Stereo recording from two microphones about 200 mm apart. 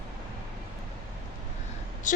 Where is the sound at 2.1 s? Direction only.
40° left (ahead or behind).